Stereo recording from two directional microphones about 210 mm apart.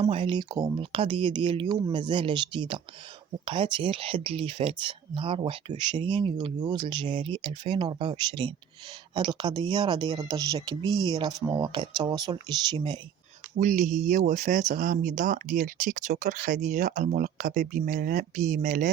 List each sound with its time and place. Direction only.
0.0 s speech: 25° right (ahead or behind)
13.6 s speech: 35° right (ahead or behind)